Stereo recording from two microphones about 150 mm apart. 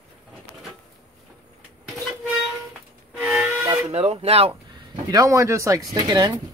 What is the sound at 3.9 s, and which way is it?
Speech, 45° right (ahead or behind).